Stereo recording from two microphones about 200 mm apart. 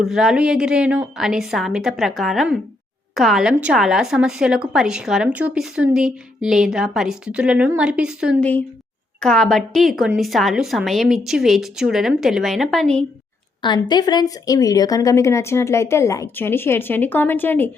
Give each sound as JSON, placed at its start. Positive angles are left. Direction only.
{"t": 0.0, "sound": "a woman's voice", "side_deg": 0}
{"t": 8.4, "sound": "a woman's voice", "side_deg": 10}
{"t": 13.6, "sound": "speech", "side_deg": 20}